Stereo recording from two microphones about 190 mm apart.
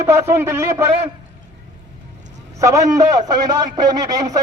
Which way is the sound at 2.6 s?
15° right (ahead or behind).